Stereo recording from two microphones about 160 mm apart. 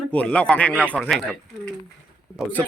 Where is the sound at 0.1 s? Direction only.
10° left (ahead or behind).